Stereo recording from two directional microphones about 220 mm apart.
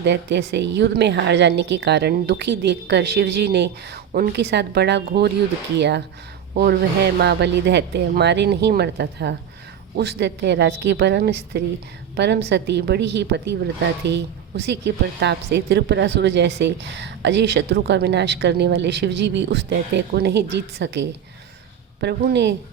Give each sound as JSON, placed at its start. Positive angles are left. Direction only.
{"t": 0.0, "sound": "a woman's voice", "side_deg": -50}